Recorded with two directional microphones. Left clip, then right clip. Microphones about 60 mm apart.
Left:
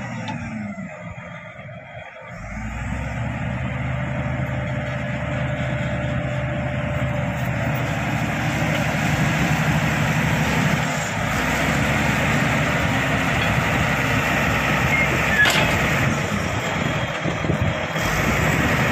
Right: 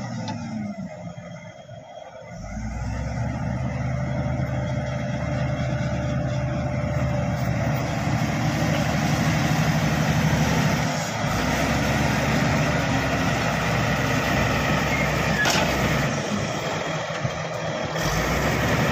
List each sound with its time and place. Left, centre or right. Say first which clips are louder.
7.5 s vehicle: left 3 dB; centre
10.9 s vehicle: left 3 dB; centre
13.7 s vehicle: left 3 dB; centre